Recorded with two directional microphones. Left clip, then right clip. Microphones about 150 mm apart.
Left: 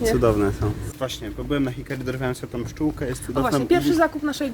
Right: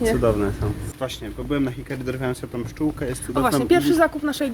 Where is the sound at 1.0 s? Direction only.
25° left (ahead or behind).